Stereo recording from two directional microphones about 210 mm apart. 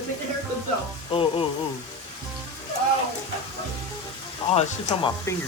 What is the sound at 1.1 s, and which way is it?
Speech, 25° left (ahead or behind).